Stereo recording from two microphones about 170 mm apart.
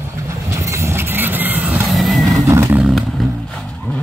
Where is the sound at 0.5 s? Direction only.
15° right (ahead or behind).